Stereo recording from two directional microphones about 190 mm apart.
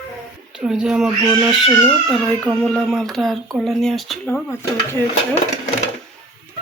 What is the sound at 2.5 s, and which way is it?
Child singing, 5° left (ahead or behind).